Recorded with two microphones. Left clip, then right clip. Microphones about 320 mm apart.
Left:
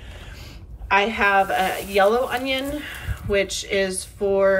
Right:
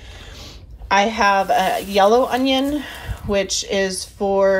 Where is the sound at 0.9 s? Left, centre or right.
Centre.